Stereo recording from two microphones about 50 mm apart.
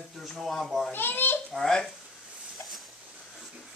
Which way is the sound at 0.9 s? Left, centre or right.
Left.